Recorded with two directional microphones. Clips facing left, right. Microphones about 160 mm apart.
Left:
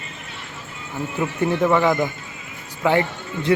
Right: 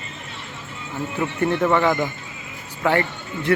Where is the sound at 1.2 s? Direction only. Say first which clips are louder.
Left 1 dB; 10° left (ahead or behind).